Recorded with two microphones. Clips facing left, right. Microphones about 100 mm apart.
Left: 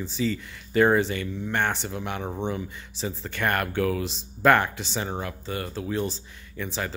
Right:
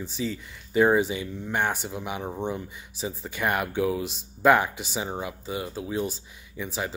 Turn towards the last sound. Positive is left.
turn(degrees=-10)  # may be behind; listen again after turning